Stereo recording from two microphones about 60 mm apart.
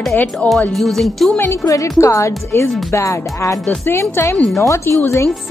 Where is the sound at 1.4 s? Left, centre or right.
Left.